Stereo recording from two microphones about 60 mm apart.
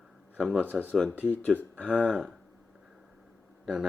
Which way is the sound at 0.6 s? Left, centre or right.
Right.